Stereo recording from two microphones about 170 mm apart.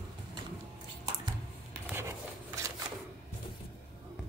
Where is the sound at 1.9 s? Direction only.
15° right (ahead or behind).